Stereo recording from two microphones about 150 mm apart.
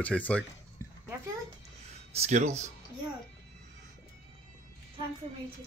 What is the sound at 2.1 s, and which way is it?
Speech, 45° right (ahead or behind).